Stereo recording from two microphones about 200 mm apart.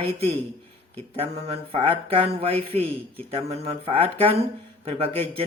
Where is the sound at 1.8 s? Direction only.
30° right (ahead or behind).